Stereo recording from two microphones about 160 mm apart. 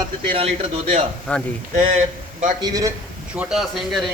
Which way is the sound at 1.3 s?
10° left (ahead or behind).